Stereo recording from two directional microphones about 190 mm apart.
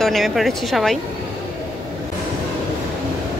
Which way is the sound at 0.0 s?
Centre (ahead or behind).